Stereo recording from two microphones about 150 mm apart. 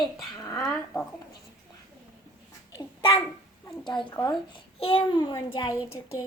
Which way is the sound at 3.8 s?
30° left (ahead or behind).